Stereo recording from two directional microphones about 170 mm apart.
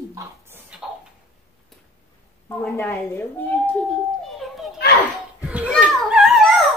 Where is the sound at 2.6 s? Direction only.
10° left (ahead or behind).